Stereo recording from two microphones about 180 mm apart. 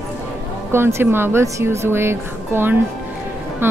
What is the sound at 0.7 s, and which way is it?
Speech, 15° right (ahead or behind).